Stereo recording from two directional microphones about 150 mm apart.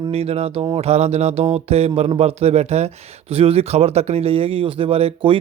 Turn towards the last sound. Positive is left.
turn(degrees=-35)  # may be behind; listen again after turning